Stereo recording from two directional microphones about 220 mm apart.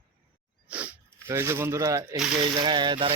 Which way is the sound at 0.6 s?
5° right (ahead or behind).